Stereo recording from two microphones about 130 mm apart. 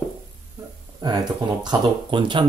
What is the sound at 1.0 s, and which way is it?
Speech, 30° right (ahead or behind).